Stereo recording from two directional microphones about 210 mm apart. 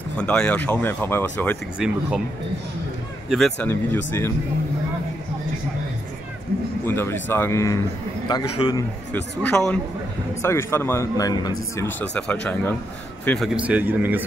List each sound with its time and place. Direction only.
0.2 s a man's voice: 5° left (ahead or behind)
1.8 s a man's voice: 5° right (ahead or behind)
3.3 s speech: centre (ahead or behind)
6.9 s a man's voice: 10° left (ahead or behind)
9.1 s a man's voice: 5° left (ahead or behind); by 14.2 s 10° right (ahead or behind)